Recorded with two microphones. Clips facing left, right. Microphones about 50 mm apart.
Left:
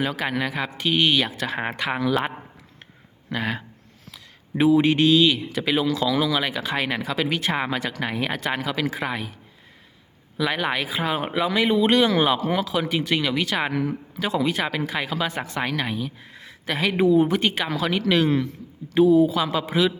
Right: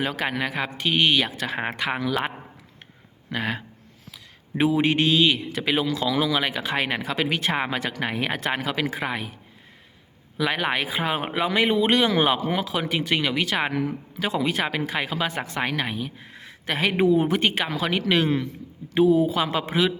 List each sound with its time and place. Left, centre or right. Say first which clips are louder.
0.0 s a man's voice: left 1 dB; centre
3.3 s a man's voice: left 1 dB; centre
4.1 s speech: left 2 dB; centre
5.6 s a man's voice: left 2 dB; centre
9.0 s a man's voice: left 1 dB; centre
10.3 s a man's voice: even; centre; by 17.6 s right
17.6 s speech: left 1 dB; centre